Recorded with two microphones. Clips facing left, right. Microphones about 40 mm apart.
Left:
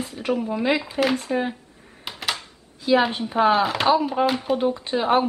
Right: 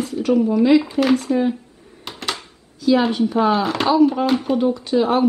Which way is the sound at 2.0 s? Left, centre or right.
Centre.